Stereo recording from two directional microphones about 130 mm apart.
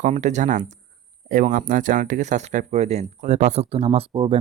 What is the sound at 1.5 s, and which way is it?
Speech, 90° right.